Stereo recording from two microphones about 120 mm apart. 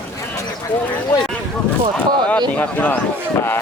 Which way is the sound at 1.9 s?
10° left (ahead or behind).